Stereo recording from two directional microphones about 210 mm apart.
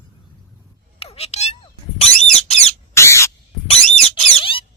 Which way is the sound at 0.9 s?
30° left (ahead or behind).